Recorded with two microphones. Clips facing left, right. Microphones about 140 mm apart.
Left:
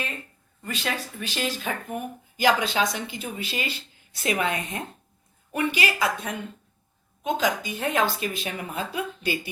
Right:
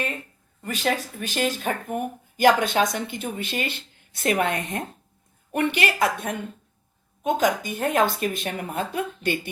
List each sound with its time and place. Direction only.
0.6 s speech: 45° right (ahead or behind)